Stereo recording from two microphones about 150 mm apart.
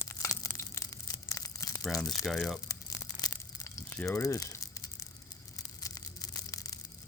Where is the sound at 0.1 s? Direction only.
20° left (ahead or behind).